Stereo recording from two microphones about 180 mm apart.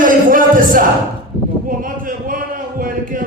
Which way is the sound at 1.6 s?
50° right (ahead or behind).